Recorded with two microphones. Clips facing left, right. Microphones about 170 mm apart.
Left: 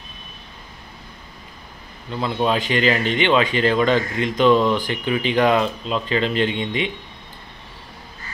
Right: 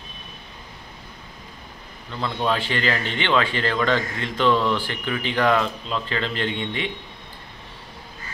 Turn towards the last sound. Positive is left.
turn(degrees=20)  # may be behind; listen again after turning